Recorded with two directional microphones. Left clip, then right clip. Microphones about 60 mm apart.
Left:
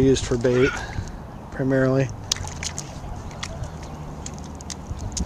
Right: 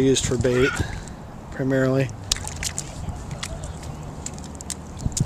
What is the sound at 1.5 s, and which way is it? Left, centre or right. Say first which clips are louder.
Speech: left 1 dB; left.